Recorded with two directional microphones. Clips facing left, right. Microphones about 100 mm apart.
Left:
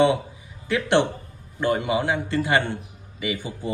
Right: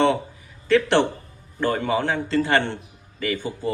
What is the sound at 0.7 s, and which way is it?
A man's voice, 20° left (ahead or behind).